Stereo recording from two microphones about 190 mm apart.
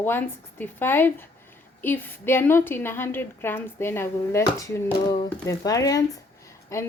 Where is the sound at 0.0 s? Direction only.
10° left (ahead or behind).